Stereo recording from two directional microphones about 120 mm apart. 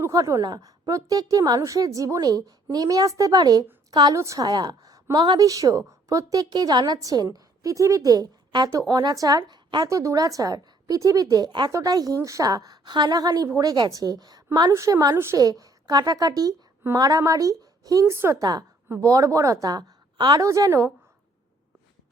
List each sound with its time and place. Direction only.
0.0 s a woman's voice: 25° right (ahead or behind)
9.9 s a woman's voice: 25° right (ahead or behind)
14.7 s a woman's voice: 25° right (ahead or behind)
20.5 s a woman's voice: 25° right (ahead or behind)